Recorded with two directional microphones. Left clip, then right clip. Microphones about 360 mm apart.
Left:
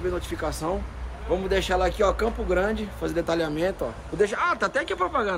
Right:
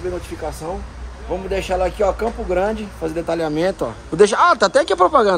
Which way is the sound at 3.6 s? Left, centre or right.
Centre.